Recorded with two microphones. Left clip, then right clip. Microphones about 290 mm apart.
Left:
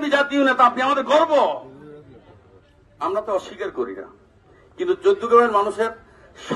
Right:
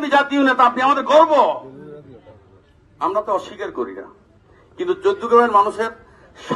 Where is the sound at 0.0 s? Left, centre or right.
Centre.